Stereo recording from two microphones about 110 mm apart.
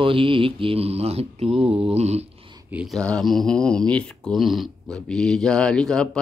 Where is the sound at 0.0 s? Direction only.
55° right (ahead or behind); by 2.2 s 75° right (ahead or behind).